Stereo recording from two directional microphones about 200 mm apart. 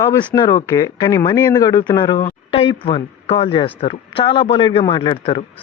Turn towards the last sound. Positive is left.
turn(degrees=25)  # may be behind; listen again after turning